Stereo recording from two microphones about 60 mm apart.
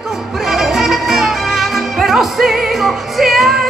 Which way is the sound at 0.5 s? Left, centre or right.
Centre.